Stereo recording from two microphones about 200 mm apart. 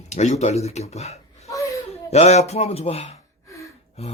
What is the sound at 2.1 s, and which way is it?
Speech, 35° left (ahead or behind).